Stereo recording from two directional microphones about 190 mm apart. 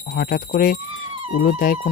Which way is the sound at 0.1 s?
50° left (ahead or behind).